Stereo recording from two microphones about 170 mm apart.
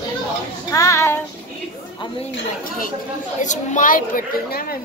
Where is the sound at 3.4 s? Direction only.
50° left (ahead or behind).